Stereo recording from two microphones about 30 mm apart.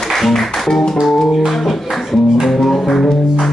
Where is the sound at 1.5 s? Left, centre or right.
Centre.